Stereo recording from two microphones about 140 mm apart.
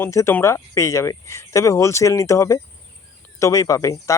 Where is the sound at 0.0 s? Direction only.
20° left (ahead or behind).